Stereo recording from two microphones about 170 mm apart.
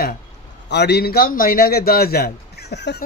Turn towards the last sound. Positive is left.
turn(degrees=80)